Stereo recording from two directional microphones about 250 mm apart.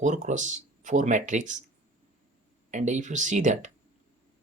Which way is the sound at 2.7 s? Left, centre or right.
Right.